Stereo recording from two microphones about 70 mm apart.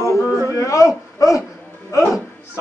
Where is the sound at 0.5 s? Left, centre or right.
Left.